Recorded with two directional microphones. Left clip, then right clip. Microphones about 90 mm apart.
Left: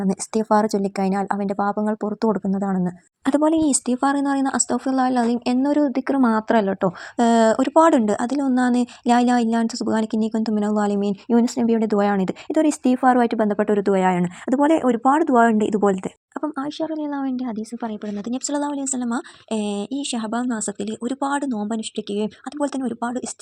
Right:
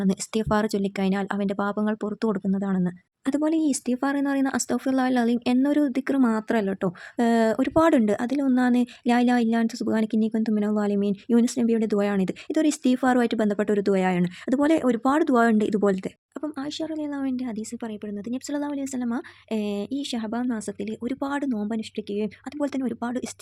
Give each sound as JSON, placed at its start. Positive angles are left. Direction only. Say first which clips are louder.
{"t": 0.5, "sound": "speech", "louder": "left 7 dB", "side_deg": 15}
{"t": 1.7, "sound": "speech", "louder": "left 4 dB", "side_deg": -40}
{"t": 2.2, "sound": "speech", "louder": "left 5 dB", "side_deg": 10}
{"t": 3.2, "sound": "speech", "louder": "left 6 dB", "side_deg": 35}
{"t": 3.6, "sound": "a woman's voice", "louder": "left 5 dB", "side_deg": 5}
{"t": 6.2, "sound": "a woman's voice", "louder": "left 6 dB", "side_deg": 5}
{"t": 17.8, "sound": "speech", "louder": "left 7 dB", "side_deg": 25}
{"t": 18.3, "sound": "speech", "louder": "left 6 dB", "side_deg": 5}
{"t": 18.7, "sound": "speech", "louder": "left 4 dB", "side_deg": -10}
{"t": 21.0, "sound": "a woman's voice", "louder": "left 5 dB", "side_deg": -10}
{"t": 21.7, "sound": "speech", "louder": "left 4 dB", "side_deg": -5}
{"t": 22.6, "sound": "a woman's voice", "louder": "left 4 dB", "side_deg": -15}